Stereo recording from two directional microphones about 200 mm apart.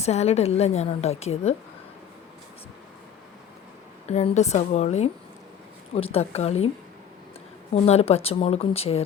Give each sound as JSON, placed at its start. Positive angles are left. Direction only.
{"t": 0.0, "sound": "a woman's voice", "side_deg": 35}
{"t": 4.0, "sound": "a woman's voice", "side_deg": 35}
{"t": 7.7, "sound": "a woman's voice", "side_deg": 30}